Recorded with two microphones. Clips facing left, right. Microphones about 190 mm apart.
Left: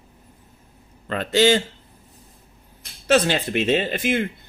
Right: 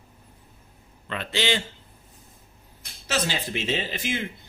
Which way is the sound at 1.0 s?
40° left (ahead or behind).